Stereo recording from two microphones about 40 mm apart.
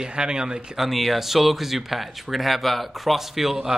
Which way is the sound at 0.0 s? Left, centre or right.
Right.